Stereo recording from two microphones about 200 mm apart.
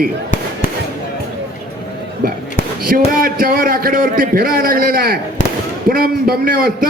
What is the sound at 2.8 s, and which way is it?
A man's voice, 45° right (ahead or behind).